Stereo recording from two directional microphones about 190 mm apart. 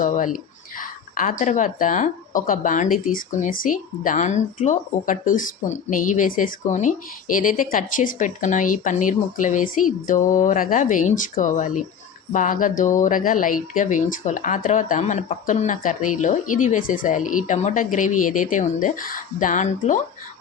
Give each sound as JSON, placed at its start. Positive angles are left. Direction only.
{"t": 0.0, "sound": "a woman's voice", "side_deg": 45}